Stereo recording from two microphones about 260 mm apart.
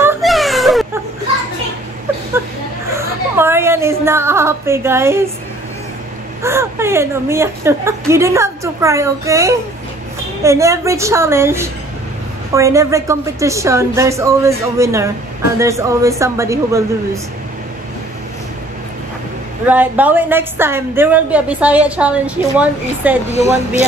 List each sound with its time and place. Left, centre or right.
0.0 s baby cry: centre
2.9 s a woman's voice: centre
6.4 s speech: centre
19.6 s a woman's voice: centre
23.3 s speech: left